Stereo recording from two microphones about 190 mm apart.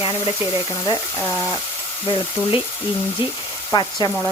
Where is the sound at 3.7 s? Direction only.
20° left (ahead or behind).